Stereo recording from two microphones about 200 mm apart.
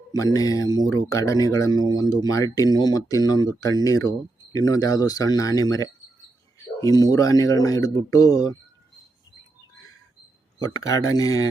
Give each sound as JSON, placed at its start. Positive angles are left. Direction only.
{"t": 0.3, "sound": "speech", "side_deg": 15}
{"t": 10.6, "sound": "speech", "side_deg": 15}